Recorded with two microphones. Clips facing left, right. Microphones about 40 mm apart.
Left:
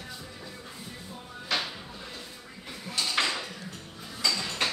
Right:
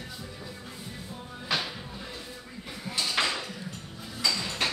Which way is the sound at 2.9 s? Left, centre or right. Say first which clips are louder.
Even; centre.